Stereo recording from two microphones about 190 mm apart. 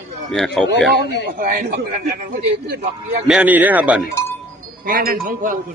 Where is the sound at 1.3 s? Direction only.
50° right (ahead or behind).